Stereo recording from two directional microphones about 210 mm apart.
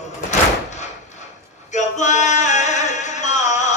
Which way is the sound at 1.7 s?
35° left (ahead or behind).